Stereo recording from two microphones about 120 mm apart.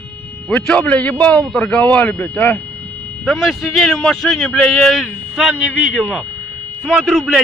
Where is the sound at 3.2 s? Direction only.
Centre (ahead or behind).